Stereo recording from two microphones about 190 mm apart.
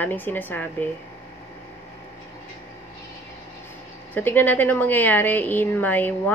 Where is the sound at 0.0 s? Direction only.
10° left (ahead or behind).